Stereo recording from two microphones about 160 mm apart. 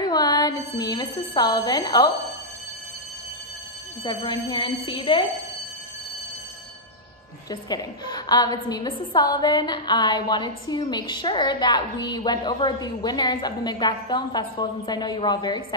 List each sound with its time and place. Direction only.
0.0 s a woman's voice: 25° left (ahead or behind)
4.0 s a woman's voice: 25° left (ahead or behind)
7.4 s a woman's voice: 25° left (ahead or behind)